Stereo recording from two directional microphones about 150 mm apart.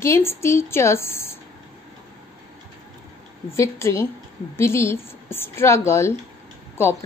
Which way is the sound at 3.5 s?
20° left (ahead or behind).